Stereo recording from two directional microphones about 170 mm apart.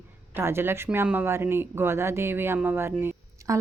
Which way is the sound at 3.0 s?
15° right (ahead or behind).